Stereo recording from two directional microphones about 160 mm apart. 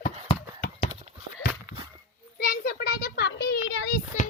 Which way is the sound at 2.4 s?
75° left (ahead or behind).